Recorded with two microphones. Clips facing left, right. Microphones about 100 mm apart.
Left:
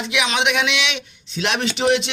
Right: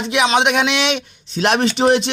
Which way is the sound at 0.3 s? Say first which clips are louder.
Right 2 dB; 40° right (ahead or behind).